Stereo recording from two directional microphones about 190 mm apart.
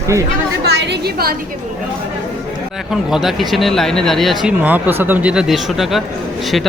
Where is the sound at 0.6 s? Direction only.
60° right (ahead or behind).